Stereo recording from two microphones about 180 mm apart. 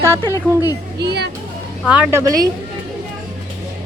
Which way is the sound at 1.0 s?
65° right (ahead or behind).